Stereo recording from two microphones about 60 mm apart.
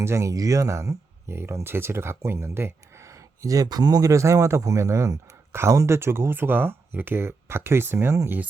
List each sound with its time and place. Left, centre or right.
0.0 s speech: right